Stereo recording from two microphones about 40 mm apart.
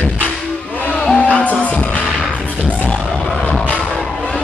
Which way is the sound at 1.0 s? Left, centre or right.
Centre.